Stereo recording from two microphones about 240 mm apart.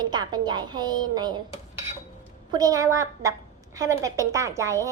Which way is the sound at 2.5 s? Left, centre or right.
Centre.